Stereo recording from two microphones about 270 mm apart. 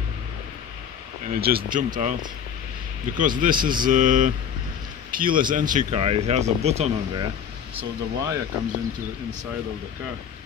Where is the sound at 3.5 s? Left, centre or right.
Centre.